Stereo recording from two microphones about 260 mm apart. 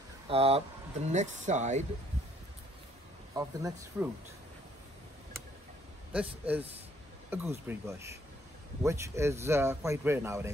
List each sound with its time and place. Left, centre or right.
0.3 s speech: right
3.3 s speech: centre
7.2 s speech: centre